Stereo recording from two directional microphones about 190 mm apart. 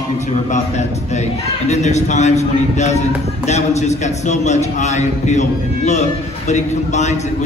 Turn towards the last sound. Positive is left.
turn(degrees=35)  # may be behind; listen again after turning